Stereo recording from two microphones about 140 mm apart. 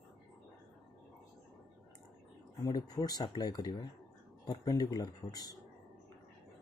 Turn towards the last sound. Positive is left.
turn(degrees=25)  # may be behind; listen again after turning